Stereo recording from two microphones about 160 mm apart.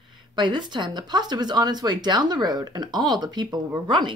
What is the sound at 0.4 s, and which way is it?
Speech, 30° right (ahead or behind).